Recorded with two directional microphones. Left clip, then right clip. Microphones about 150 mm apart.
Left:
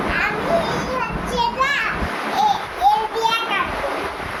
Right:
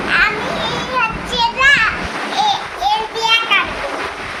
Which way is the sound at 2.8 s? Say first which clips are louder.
Right 1 dB; 25° left (ahead or behind).